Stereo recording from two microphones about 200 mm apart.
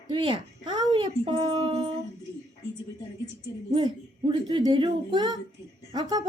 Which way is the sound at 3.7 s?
25° right (ahead or behind).